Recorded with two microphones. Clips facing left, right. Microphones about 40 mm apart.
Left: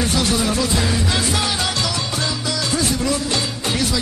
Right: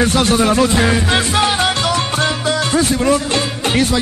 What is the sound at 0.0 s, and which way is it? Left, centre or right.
Music, right.